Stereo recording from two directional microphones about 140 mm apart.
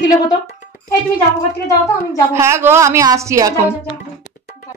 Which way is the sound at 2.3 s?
20° right (ahead or behind).